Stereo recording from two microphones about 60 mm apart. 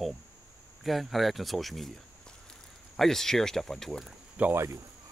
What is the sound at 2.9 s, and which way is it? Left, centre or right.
Speech, centre.